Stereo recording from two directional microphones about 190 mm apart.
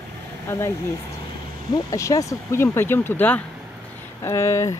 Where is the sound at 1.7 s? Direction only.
15° left (ahead or behind).